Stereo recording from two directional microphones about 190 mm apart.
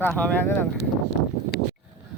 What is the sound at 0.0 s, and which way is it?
Speech, 5° left (ahead or behind).